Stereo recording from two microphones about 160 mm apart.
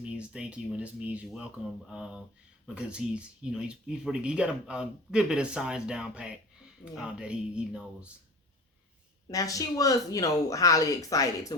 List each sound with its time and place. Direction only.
0.0 s speech: 5° right (ahead or behind)
9.3 s speech: 20° left (ahead or behind)